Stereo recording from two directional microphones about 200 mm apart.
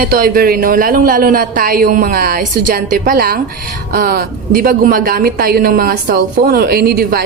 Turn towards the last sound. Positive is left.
turn(degrees=-50)  # may be behind; listen again after turning